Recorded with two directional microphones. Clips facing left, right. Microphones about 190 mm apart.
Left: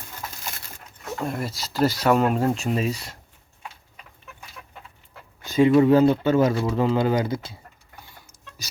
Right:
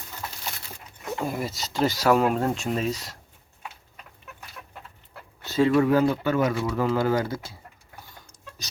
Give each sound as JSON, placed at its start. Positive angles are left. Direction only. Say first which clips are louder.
{"t": 1.1, "sound": "speech", "louder": "even", "side_deg": 0}
{"t": 5.4, "sound": "speech", "louder": "left 4 dB", "side_deg": 15}